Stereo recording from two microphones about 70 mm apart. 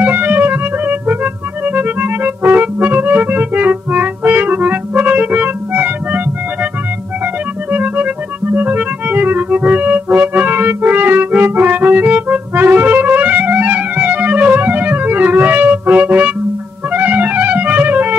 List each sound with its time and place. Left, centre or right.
0.0 s music: right
7.7 s music: right